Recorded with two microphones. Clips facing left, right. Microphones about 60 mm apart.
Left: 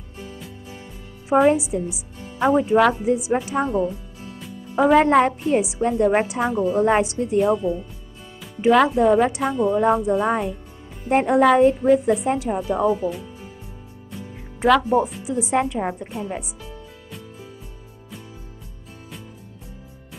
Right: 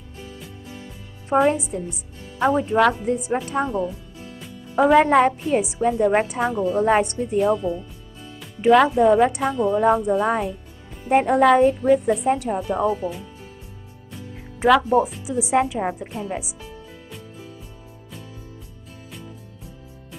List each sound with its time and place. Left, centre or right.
1.3 s a woman's voice: centre
7.5 s speech: centre
8.5 s a woman's voice: centre
14.6 s a woman's voice: centre